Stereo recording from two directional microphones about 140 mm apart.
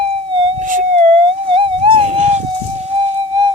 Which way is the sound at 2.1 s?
55° right (ahead or behind).